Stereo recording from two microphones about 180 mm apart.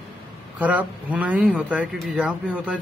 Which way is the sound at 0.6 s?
10° right (ahead or behind).